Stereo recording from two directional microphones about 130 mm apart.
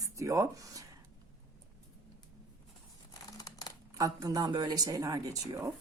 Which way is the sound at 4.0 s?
30° right (ahead or behind).